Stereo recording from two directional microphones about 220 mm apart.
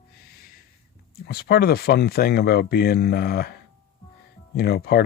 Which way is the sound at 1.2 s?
45° left (ahead or behind).